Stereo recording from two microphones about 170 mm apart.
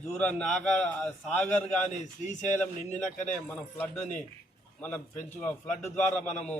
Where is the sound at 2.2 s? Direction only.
45° left (ahead or behind).